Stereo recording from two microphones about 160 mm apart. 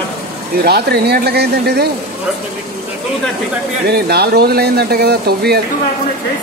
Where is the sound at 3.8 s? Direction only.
90° right.